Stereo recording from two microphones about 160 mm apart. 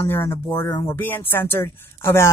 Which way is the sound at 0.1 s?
15° left (ahead or behind).